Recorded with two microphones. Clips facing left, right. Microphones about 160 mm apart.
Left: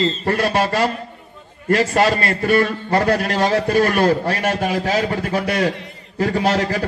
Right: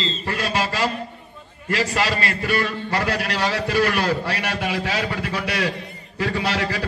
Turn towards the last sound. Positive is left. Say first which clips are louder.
# left 5 dB
turn(degrees=45)  # may be behind; listen again after turning